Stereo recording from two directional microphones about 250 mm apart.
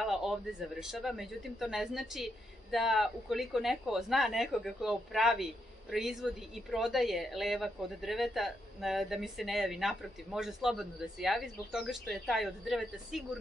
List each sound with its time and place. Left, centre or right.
0.0 s a man's voice: centre